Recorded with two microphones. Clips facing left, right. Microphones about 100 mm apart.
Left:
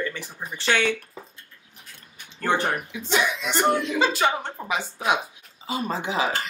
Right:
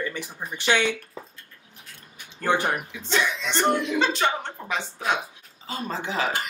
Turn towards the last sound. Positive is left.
turn(degrees=15)  # may be behind; listen again after turning